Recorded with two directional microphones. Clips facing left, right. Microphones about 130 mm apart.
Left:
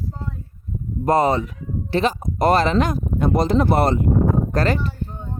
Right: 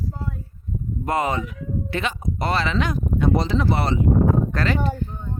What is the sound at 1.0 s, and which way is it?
Speech, 35° left (ahead or behind).